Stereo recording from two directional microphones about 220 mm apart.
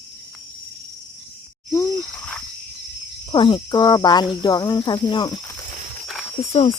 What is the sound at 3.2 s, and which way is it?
Speech, 20° left (ahead or behind).